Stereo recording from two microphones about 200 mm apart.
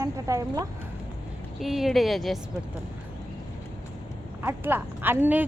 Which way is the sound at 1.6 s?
Centre (ahead or behind).